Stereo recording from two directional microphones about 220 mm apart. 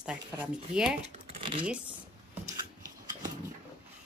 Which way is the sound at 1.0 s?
25° right (ahead or behind).